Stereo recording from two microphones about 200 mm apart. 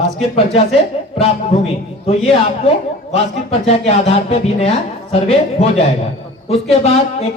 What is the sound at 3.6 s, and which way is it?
A man's voice, 30° left (ahead or behind).